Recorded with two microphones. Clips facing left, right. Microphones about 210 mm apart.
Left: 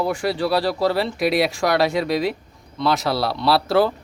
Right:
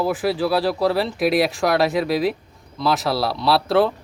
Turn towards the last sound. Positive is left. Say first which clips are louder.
# even
turn(degrees=0)  # may be behind; listen again after turning